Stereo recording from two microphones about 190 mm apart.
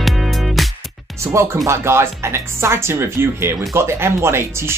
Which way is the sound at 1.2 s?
15° right (ahead or behind).